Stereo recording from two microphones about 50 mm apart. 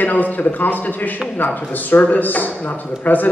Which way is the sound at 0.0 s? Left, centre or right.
Left.